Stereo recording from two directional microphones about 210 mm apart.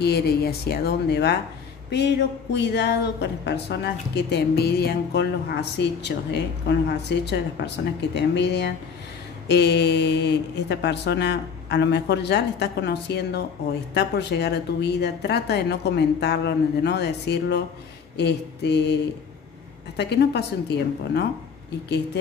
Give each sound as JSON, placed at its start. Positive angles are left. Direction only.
{"t": 0.0, "sound": "speech", "side_deg": 50}
{"t": 2.5, "sound": "a woman's voice", "side_deg": 55}
{"t": 20.0, "sound": "speech", "side_deg": 55}